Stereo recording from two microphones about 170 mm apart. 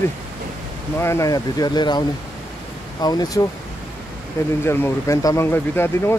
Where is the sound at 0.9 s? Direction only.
15° left (ahead or behind).